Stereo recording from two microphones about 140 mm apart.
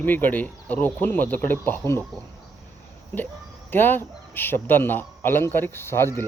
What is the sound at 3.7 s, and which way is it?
A man's voice, 15° left (ahead or behind).